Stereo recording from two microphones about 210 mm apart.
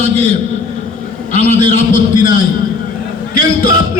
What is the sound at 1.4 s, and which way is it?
Speech, 35° left (ahead or behind).